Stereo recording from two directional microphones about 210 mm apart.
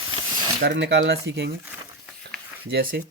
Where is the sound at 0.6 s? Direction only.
55° right (ahead or behind).